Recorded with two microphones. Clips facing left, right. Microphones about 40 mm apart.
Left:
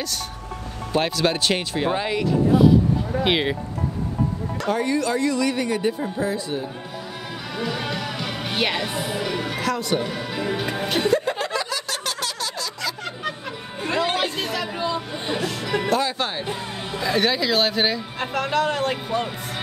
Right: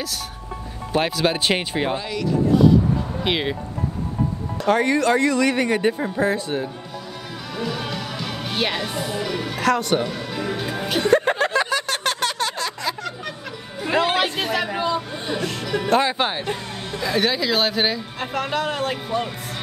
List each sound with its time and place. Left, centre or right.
0.9 s speech: centre
2.0 s speech: left
3.3 s speech: centre
4.6 s speech: right
7.5 s music: centre
9.6 s a woman's voice: right
10.0 s speech: centre
11.1 s a sound: right
14.1 s chatter: right
14.5 s hubbub: right
15.6 s music: centre
15.9 s speech: right
17.0 s speech: centre